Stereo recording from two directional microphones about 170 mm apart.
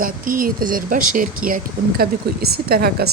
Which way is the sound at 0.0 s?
55° right (ahead or behind).